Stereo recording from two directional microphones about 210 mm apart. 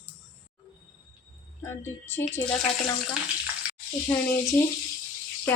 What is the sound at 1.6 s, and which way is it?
Speech, 10° left (ahead or behind).